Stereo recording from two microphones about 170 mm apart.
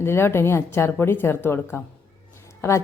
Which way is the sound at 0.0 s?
15° left (ahead or behind).